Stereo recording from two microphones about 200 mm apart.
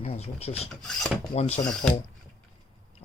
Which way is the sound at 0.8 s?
Centre (ahead or behind).